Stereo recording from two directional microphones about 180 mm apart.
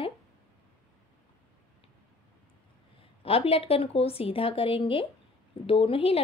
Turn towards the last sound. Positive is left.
turn(degrees=30)  # may be behind; listen again after turning